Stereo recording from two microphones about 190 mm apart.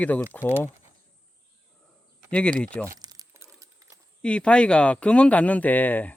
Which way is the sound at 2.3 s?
5° left (ahead or behind).